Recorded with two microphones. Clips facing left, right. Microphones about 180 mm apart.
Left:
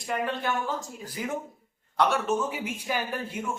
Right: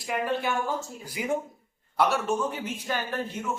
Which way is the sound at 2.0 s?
Centre (ahead or behind).